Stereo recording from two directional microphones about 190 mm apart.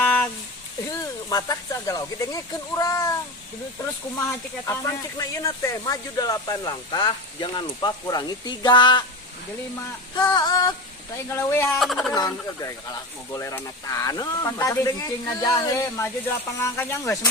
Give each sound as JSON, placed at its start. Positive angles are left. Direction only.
{"t": 0.0, "sound": "a sound", "side_deg": 5}
{"t": 1.3, "sound": "speech", "side_deg": 20}
{"t": 4.1, "sound": "speech", "side_deg": 15}
{"t": 10.2, "sound": "speech", "side_deg": 20}
{"t": 11.8, "sound": "speech", "side_deg": 0}
{"t": 12.1, "sound": "speech", "side_deg": 20}